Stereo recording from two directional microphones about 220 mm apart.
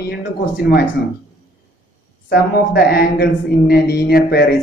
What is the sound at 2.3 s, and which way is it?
A man's voice, 45° left (ahead or behind).